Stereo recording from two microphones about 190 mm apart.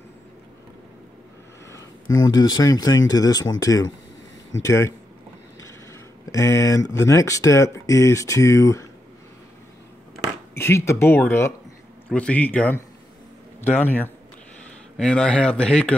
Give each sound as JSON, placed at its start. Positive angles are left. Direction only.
{"t": 1.7, "sound": "a sound", "side_deg": 20}
{"t": 2.5, "sound": "speech", "side_deg": 20}
{"t": 6.2, "sound": "speech", "side_deg": 15}
{"t": 10.6, "sound": "speech", "side_deg": 15}